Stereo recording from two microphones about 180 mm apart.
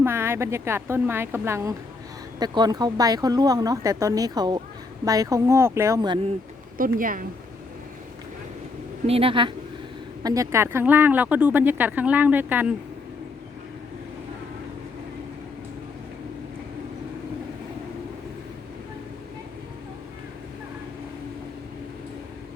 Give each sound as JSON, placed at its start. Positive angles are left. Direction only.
{"t": 0.0, "sound": "speech", "side_deg": -15}
{"t": 6.7, "sound": "speech", "side_deg": -50}
{"t": 9.0, "sound": "speech", "side_deg": -30}
{"t": 10.2, "sound": "speech", "side_deg": -20}